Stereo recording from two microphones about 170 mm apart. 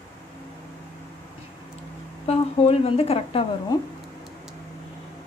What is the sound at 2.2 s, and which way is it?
A woman's voice, 35° left (ahead or behind).